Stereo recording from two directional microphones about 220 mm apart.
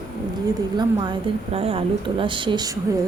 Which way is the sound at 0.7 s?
20° right (ahead or behind).